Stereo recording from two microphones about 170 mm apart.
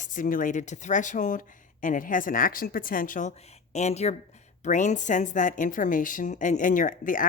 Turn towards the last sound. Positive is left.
turn(degrees=50)  # may be behind; listen again after turning